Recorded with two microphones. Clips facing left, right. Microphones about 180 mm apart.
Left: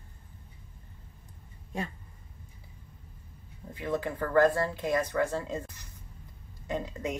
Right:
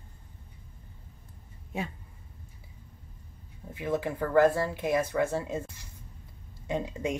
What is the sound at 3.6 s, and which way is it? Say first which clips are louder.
Speech: right 2 dB; 5° right (ahead or behind).